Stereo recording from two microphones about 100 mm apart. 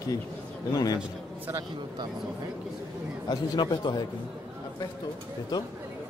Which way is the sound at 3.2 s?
45° left (ahead or behind).